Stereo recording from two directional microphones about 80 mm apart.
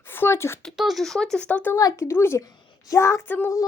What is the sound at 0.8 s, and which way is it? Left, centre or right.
Speech, centre.